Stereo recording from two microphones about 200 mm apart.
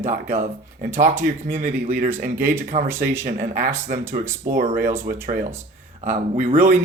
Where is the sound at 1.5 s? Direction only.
40° right (ahead or behind).